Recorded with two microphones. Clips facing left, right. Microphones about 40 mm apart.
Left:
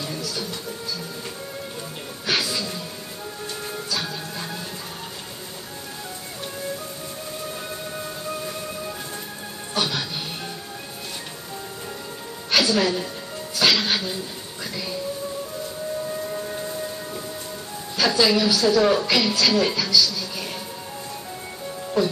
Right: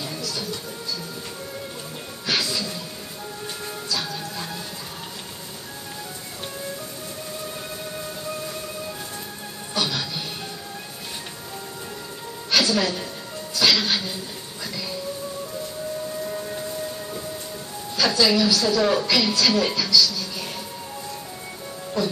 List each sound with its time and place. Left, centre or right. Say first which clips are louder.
0.2 s music: left 1 dB; centre
2.2 s music: left 1 dB; centre
3.9 s music: right 1 dB; centre
9.8 s music: left 1 dB; centre
12.4 s music: left 1 dB; centre
16.3 s civil defense siren: even; centre
17.9 s a woman's voice: even; centre
22.0 s speech: left 3 dB; centre